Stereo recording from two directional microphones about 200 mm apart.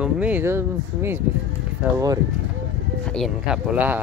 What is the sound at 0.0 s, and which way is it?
Speech, 5° right (ahead or behind).